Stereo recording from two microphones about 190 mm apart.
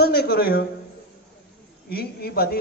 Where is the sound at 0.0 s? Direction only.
55° left (ahead or behind).